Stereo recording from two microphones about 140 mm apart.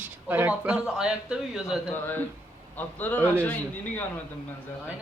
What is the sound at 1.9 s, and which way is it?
Speech, 15° left (ahead or behind).